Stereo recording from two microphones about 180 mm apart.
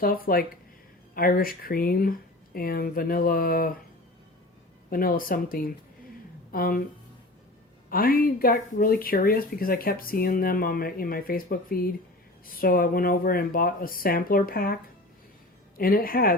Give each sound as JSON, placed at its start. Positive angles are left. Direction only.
{"t": 0.0, "sound": "speech", "side_deg": 55}
{"t": 4.9, "sound": "speech", "side_deg": 55}
{"t": 7.9, "sound": "speech", "side_deg": 55}
{"t": 15.8, "sound": "speech", "side_deg": 55}